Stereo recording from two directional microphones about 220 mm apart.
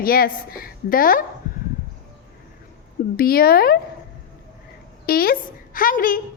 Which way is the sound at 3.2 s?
45° left (ahead or behind).